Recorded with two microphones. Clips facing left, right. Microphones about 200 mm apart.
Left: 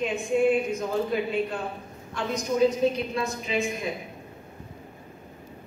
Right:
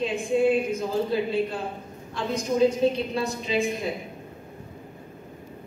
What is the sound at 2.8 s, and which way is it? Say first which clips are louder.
A woman's voice: right 1 dB; 30° right (ahead or behind).